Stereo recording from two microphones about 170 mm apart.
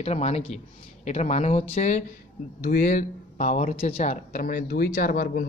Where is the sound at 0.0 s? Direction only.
35° left (ahead or behind).